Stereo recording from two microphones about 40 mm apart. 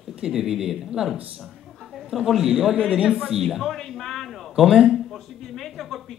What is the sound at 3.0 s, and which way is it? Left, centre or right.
Speech, centre.